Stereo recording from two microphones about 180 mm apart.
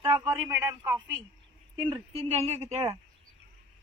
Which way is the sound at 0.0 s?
25° right (ahead or behind).